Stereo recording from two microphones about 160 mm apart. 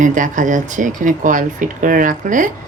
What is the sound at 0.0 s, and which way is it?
Speech, 55° right (ahead or behind).